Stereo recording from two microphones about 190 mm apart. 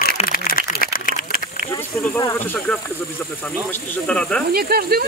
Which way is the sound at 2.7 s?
10° left (ahead or behind).